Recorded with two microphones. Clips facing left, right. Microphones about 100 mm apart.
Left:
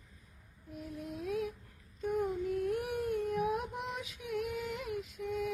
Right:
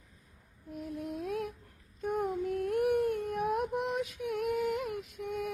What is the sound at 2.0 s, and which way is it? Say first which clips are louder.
Child singing: right 1 dB; 50° right (ahead or behind).